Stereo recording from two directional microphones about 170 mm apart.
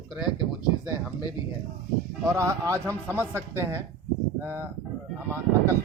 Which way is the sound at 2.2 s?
15° right (ahead or behind).